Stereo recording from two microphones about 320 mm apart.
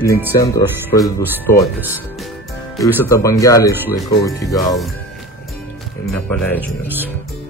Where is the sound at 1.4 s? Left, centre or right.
Centre.